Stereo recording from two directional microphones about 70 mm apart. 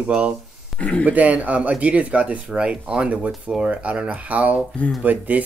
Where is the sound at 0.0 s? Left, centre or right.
Centre.